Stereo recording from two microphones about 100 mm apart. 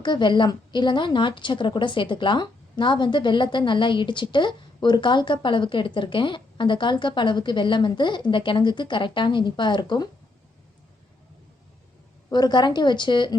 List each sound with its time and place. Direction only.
0.0 s a woman's voice: 50° left (ahead or behind)
12.3 s a woman's voice: 45° left (ahead or behind)